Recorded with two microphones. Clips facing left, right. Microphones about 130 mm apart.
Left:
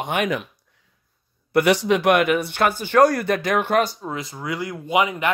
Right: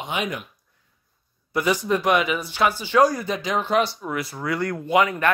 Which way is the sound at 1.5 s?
70° left (ahead or behind).